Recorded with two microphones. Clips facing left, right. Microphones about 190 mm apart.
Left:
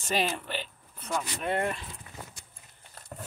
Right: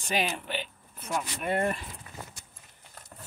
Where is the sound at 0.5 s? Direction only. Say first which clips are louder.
Right 1 dB; centre (ahead or behind).